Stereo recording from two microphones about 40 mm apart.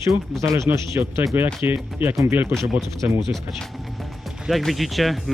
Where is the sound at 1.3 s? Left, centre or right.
Right.